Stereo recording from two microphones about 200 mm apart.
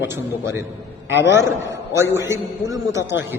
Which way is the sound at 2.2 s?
15° right (ahead or behind).